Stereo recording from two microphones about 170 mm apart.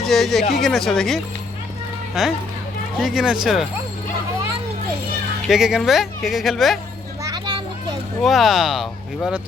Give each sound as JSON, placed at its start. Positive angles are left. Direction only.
{"t": 0.0, "sound": "speech", "side_deg": 0}
{"t": 5.5, "sound": "speech", "side_deg": -5}
{"t": 7.2, "sound": "children playing", "side_deg": -20}
{"t": 8.2, "sound": "speech", "side_deg": 0}